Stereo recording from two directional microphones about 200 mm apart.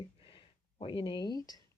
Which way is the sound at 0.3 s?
25° left (ahead or behind).